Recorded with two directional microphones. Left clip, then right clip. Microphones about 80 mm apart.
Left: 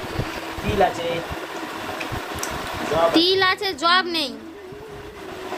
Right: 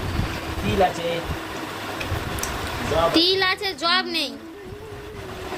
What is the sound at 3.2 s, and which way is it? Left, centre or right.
A woman's voice, left.